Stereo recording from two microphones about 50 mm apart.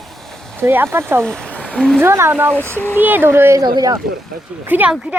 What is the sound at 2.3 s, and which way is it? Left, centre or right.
Speech, right.